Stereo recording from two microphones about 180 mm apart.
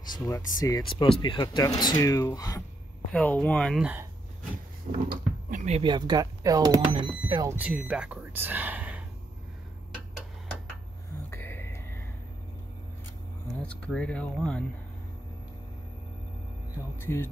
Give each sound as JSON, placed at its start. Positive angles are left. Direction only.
{"t": 0.0, "sound": "speech", "side_deg": 20}
{"t": 3.1, "sound": "speech", "side_deg": 5}
{"t": 4.9, "sound": "speech", "side_deg": -45}
{"t": 5.8, "sound": "speech", "side_deg": -25}
{"t": 7.4, "sound": "speech", "side_deg": -10}
{"t": 11.2, "sound": "music", "side_deg": 10}
{"t": 13.6, "sound": "speech", "side_deg": 5}
{"t": 17.0, "sound": "a man's voice", "side_deg": 15}